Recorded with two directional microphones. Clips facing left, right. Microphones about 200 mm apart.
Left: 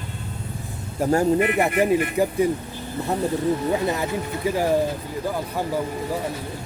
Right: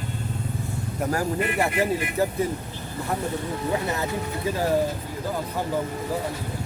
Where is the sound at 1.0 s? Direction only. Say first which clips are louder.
Left 7 dB; 25° left (ahead or behind).